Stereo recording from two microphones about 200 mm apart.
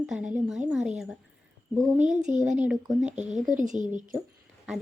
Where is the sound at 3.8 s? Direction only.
40° right (ahead or behind).